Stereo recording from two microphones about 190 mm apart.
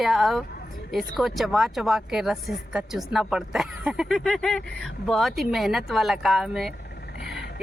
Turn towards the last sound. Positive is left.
turn(degrees=55)  # may be behind; listen again after turning